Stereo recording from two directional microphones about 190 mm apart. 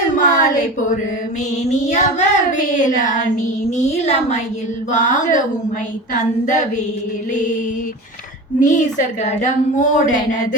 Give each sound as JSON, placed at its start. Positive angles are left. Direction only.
{"t": 0.2, "sound": "a sound", "side_deg": 45}
{"t": 1.9, "sound": "child singing", "side_deg": 40}
{"t": 3.7, "sound": "a woman's voice", "side_deg": 35}
{"t": 8.6, "sound": "a woman's voice", "side_deg": 40}